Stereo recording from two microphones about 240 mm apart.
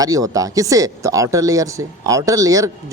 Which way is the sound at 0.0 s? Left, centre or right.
Centre.